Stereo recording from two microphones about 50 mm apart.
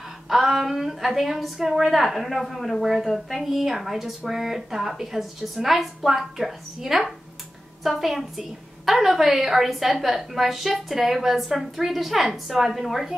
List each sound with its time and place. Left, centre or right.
0.3 s a woman's voice: centre